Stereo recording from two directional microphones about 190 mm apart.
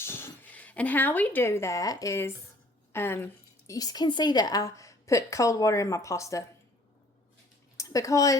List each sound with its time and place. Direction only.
0.0 s a woman's voice: 10° left (ahead or behind)
7.8 s speech: 15° left (ahead or behind)